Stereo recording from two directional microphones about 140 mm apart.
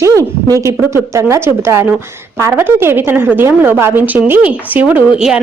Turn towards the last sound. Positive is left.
turn(degrees=-5)  # may be behind; listen again after turning